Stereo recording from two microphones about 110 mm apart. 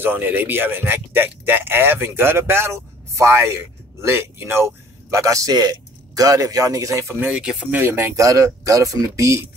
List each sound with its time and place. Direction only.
0.0 s speech: 20° right (ahead or behind)
7.2 s speech: 10° right (ahead or behind)
7.7 s speech: 20° right (ahead or behind)